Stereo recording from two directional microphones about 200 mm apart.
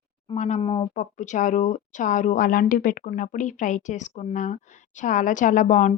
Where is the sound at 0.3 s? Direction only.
35° left (ahead or behind).